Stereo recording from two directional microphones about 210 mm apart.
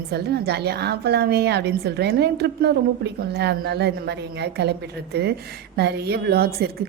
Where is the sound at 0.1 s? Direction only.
50° right (ahead or behind).